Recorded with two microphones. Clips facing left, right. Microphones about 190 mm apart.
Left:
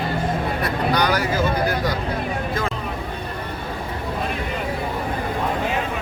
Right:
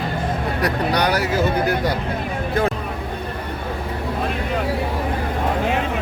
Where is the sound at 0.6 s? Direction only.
65° right (ahead or behind).